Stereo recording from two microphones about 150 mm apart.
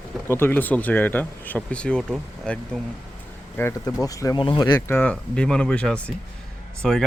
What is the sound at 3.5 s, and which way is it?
Speech, 20° left (ahead or behind).